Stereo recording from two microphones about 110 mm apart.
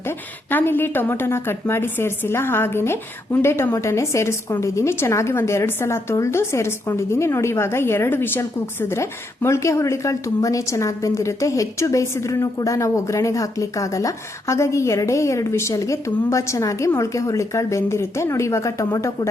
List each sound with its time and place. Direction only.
0.0 s a woman's voice: 20° left (ahead or behind)